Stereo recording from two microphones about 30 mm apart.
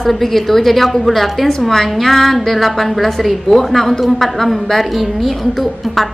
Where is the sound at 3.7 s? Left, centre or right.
Centre.